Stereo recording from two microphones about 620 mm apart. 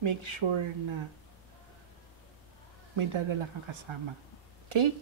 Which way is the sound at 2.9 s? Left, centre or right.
Right.